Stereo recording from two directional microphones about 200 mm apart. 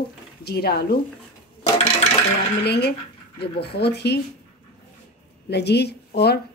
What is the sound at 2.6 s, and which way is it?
A woman's voice, 55° left (ahead or behind).